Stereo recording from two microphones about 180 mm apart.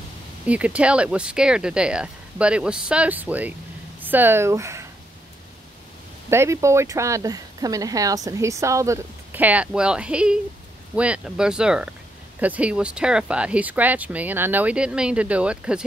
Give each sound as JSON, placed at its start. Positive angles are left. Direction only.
{"t": 0.5, "sound": "speech", "side_deg": -5}
{"t": 6.3, "sound": "speech", "side_deg": -15}